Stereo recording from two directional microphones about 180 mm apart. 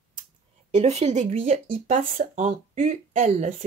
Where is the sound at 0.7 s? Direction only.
35° right (ahead or behind).